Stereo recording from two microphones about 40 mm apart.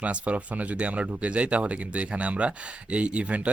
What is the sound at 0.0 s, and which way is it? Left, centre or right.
Speech, right.